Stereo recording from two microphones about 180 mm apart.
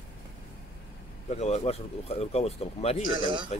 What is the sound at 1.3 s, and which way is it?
Speech, 35° left (ahead or behind).